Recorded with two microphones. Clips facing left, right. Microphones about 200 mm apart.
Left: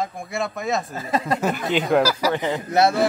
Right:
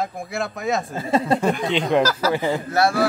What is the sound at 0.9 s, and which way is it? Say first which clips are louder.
Speech: right 4 dB; 25° right (ahead or behind).